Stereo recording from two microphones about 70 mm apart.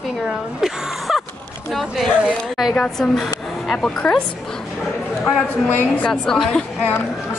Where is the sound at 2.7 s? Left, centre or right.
Centre.